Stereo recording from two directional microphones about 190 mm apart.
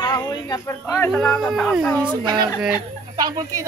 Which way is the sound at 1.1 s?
Centre (ahead or behind).